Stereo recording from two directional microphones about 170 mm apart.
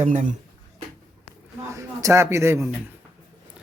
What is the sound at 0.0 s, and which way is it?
Speech, 45° right (ahead or behind).